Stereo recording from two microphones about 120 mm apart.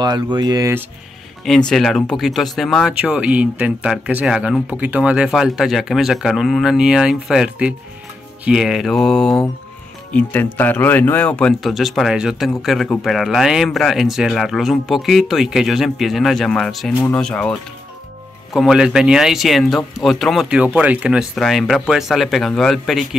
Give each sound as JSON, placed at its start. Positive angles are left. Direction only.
{"t": 0.0, "sound": "speech", "side_deg": -35}
{"t": 1.7, "sound": "speech", "side_deg": 5}
{"t": 10.1, "sound": "speech", "side_deg": 15}
{"t": 18.5, "sound": "speech", "side_deg": -5}
{"t": 20.4, "sound": "speech", "side_deg": -10}